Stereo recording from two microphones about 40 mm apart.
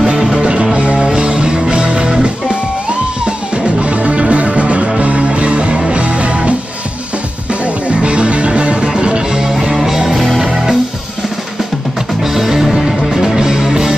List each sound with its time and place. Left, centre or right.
0.1 s music: right
3.3 s music: right
7.9 s music: right
9.4 s music: centre
12.4 s music: centre